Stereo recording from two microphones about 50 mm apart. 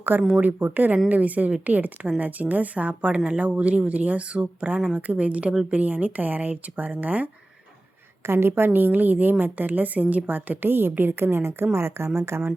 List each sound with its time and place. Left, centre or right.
0.1 s a woman's voice: right
8.3 s a woman's voice: right